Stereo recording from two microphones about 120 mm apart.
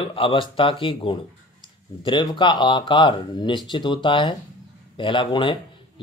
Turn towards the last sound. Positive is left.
turn(degrees=40)  # may be behind; listen again after turning